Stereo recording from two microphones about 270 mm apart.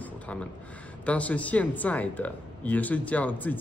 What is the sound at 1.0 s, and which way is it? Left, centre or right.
Speech, centre.